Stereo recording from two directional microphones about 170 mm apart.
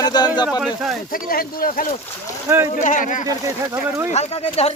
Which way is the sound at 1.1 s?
55° left (ahead or behind).